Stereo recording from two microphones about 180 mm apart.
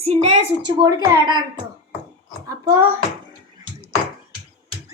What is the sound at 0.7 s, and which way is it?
Speech, 25° right (ahead or behind).